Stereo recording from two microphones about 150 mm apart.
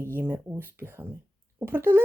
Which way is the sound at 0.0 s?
15° right (ahead or behind).